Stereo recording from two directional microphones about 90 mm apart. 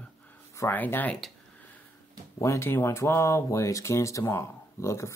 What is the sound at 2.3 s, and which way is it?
Speech, 35° left (ahead or behind).